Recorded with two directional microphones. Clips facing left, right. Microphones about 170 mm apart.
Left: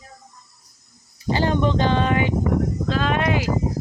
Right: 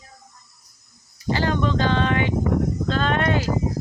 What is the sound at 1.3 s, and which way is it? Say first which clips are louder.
Speech: left 2 dB; 20° left (ahead or behind).